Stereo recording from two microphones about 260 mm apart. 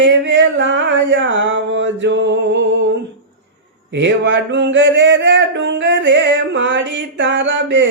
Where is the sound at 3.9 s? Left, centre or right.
Right.